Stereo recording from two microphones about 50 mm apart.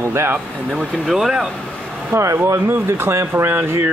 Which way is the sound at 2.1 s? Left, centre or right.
Right.